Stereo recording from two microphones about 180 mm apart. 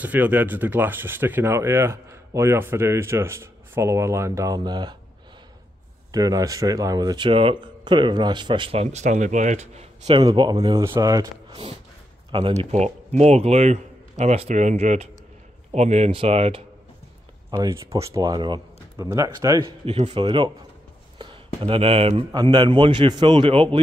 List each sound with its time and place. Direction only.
0.0 s speech: 10° right (ahead or behind)
6.1 s speech: 20° right (ahead or behind)
12.7 s a man's voice: 40° right (ahead or behind)
17.5 s speech: 20° right (ahead or behind)
19.9 s speech: 35° right (ahead or behind)
21.5 s speech: 30° right (ahead or behind)